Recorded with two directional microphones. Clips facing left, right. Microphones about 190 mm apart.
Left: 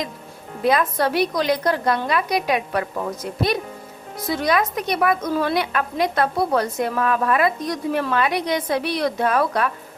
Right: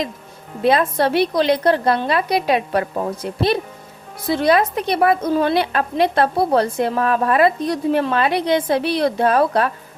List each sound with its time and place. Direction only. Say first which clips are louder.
0.6 s a woman's voice: right 3 dB; 30° right (ahead or behind)